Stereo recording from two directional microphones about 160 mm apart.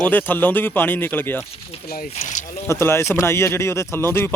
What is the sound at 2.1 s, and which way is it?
Speech, 50° left (ahead or behind).